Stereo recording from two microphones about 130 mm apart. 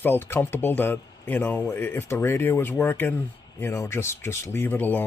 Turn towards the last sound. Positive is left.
turn(degrees=15)  # may be behind; listen again after turning